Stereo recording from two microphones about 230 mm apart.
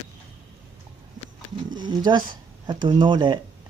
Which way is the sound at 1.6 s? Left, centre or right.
Centre.